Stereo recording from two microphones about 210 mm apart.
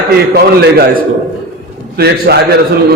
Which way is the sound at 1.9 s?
50° right (ahead or behind).